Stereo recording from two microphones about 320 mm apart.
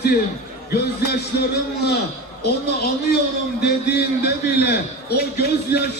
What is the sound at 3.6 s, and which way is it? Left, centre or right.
A man's voice, left.